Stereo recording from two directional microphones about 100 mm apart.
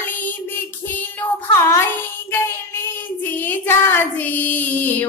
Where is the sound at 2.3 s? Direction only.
20° left (ahead or behind).